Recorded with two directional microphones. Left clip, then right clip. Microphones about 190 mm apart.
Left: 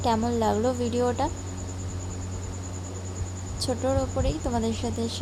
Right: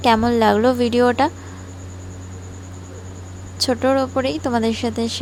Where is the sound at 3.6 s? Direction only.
35° right (ahead or behind).